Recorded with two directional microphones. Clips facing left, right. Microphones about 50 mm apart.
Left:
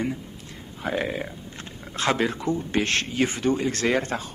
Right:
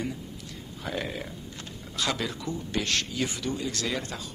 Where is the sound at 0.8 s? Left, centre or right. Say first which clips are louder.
Left 6 dB; left.